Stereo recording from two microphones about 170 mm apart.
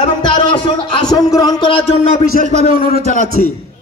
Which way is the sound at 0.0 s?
30° left (ahead or behind).